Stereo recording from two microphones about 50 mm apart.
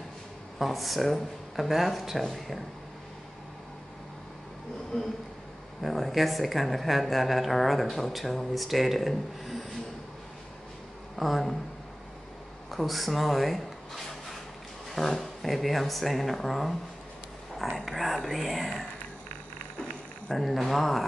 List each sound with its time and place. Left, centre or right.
0.6 s speech: centre
4.9 s speech: centre
5.8 s speech: centre
11.1 s speech: centre
12.7 s speech: centre
20.3 s speech: centre